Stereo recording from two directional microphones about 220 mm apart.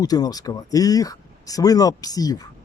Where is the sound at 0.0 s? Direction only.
15° left (ahead or behind).